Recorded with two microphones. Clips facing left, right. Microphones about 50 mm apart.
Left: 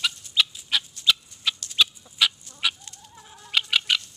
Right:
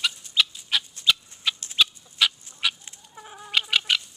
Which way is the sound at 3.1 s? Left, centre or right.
Centre.